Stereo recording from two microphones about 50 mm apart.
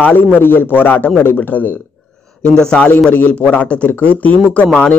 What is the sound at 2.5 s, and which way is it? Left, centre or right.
Speech, centre.